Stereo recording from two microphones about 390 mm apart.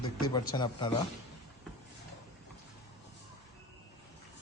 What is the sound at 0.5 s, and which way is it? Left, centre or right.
Speech, centre.